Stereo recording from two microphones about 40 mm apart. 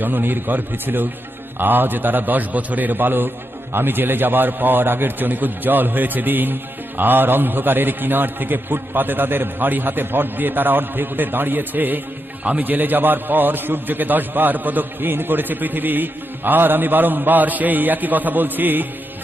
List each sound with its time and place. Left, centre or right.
0.0 s a man's voice: right